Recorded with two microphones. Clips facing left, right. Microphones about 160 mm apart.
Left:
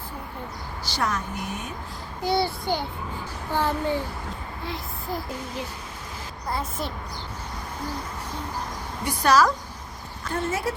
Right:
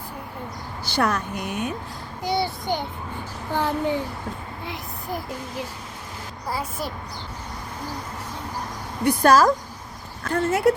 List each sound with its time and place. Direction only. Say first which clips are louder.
0.9 s speech: right 5 dB; 60° right (ahead or behind)
2.2 s a child's voice: left 1 dB; 20° right (ahead or behind)
4.6 s a sound: left 2 dB; 15° right (ahead or behind)
6.5 s a child's voice: right 1 dB; 10° right (ahead or behind)
9.0 s speech: right 4 dB; 50° right (ahead or behind)
10.2 s speech: right 7 dB; 65° right (ahead or behind)